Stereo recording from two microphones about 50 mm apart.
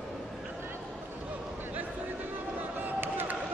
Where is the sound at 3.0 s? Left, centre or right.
Right.